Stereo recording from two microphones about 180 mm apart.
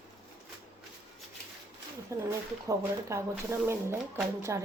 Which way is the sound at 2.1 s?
15° right (ahead or behind).